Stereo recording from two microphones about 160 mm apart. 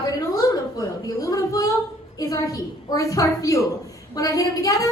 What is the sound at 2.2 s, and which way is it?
Speech, 20° left (ahead or behind).